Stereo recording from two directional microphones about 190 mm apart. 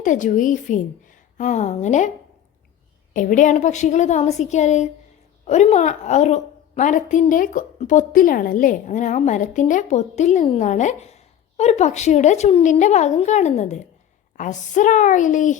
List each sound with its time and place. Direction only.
0.0 s a woman's voice: 40° left (ahead or behind)
3.1 s a woman's voice: 45° left (ahead or behind)